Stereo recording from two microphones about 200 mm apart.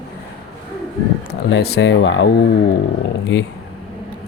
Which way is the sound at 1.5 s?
55° left (ahead or behind).